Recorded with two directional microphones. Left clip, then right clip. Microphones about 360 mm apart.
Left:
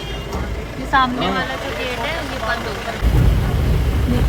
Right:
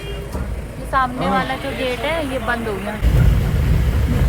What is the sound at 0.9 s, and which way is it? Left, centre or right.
Speech, centre.